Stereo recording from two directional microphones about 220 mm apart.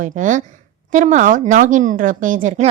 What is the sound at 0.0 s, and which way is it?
A woman's voice, 35° right (ahead or behind).